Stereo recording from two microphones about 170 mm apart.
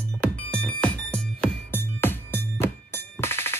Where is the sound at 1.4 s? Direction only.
15° left (ahead or behind).